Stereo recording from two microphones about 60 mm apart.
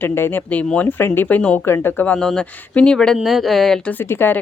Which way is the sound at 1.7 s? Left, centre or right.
Left.